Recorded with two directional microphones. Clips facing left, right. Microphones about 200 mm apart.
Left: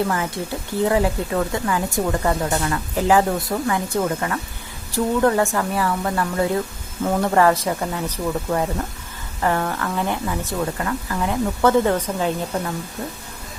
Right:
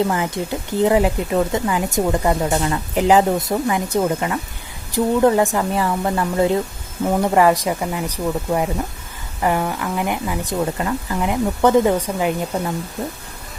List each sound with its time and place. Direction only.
0.4 s speech: 15° right (ahead or behind)